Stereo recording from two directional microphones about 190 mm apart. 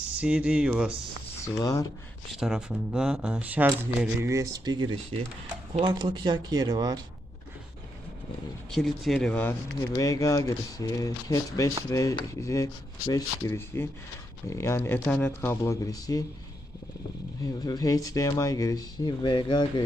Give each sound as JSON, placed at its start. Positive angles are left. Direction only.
{"t": 0.2, "sound": "speech", "side_deg": -5}
{"t": 1.5, "sound": "speech", "side_deg": 20}
{"t": 2.4, "sound": "speech", "side_deg": -5}
{"t": 8.7, "sound": "speech", "side_deg": 0}
{"t": 17.4, "sound": "speech", "side_deg": 20}